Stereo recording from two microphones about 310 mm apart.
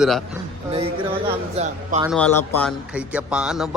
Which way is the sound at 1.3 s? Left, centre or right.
Centre.